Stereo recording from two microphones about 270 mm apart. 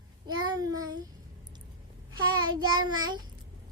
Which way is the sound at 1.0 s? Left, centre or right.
Centre.